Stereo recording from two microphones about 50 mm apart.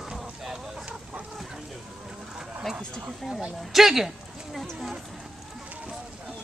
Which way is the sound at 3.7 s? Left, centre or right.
Centre.